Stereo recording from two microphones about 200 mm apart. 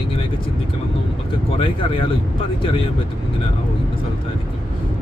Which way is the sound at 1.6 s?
25° left (ahead or behind).